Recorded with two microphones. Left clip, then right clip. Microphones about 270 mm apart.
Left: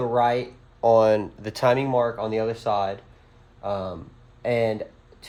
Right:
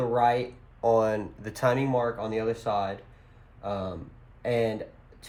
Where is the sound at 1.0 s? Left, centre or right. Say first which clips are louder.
Left 8 dB; left.